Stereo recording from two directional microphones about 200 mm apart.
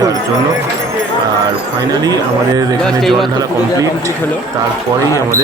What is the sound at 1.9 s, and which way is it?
Speech, 20° right (ahead or behind).